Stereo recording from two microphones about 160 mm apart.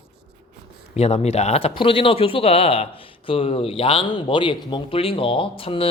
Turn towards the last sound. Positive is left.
turn(degrees=35)  # may be behind; listen again after turning